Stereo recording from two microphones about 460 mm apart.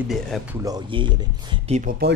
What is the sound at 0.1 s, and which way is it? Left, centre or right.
Speech, centre.